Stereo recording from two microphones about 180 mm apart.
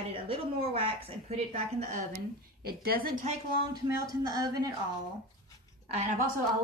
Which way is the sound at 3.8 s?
20° right (ahead or behind).